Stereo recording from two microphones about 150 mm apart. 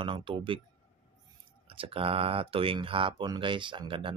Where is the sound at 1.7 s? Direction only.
35° right (ahead or behind).